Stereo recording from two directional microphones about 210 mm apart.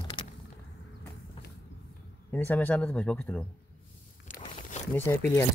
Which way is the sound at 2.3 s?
10° left (ahead or behind).